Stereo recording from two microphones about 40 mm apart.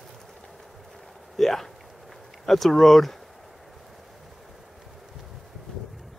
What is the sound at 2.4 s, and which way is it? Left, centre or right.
Speech, centre.